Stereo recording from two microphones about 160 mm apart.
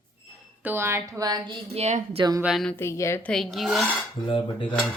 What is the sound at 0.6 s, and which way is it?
Speech, 15° right (ahead or behind).